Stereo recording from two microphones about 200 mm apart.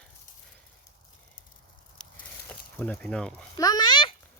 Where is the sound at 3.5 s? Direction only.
20° left (ahead or behind).